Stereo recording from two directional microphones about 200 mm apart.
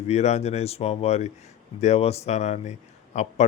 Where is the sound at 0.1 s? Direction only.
35° left (ahead or behind).